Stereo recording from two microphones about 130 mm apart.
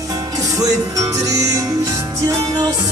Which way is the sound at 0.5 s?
25° right (ahead or behind).